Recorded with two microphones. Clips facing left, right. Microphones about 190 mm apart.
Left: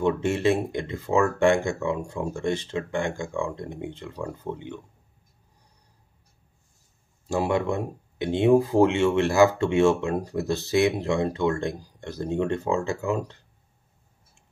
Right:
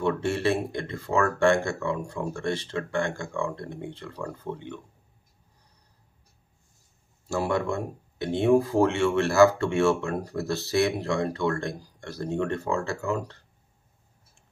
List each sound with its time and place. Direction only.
0.0 s speech: 15° left (ahead or behind)
7.2 s speech: 15° left (ahead or behind)